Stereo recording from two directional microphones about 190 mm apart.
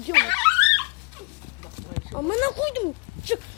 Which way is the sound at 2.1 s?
20° left (ahead or behind).